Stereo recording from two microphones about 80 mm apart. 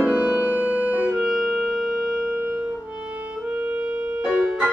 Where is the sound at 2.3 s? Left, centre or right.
Right.